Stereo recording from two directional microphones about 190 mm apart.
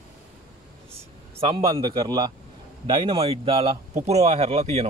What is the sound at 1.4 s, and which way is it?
A man's voice, 20° right (ahead or behind).